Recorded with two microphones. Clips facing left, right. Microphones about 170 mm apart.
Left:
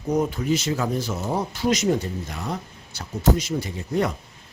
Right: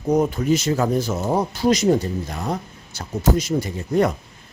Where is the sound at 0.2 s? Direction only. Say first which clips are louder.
Right 4 dB; 45° right (ahead or behind).